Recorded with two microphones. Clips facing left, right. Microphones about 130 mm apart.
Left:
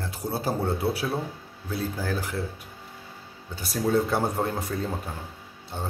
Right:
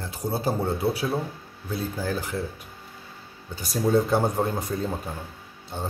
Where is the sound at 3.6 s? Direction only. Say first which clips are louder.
Right 2 dB; 5° left (ahead or behind).